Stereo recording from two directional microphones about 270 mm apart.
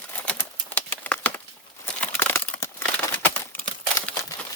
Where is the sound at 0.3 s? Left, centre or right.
Centre.